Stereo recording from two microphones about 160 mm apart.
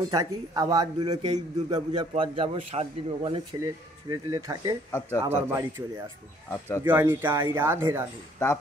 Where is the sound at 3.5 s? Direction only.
20° right (ahead or behind).